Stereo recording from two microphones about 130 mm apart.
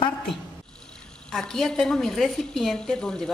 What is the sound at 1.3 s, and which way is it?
A woman's voice, 5° left (ahead or behind).